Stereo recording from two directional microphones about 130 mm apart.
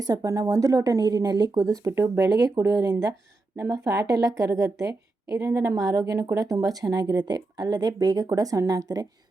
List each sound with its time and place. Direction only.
0.0 s a woman's voice: 30° right (ahead or behind)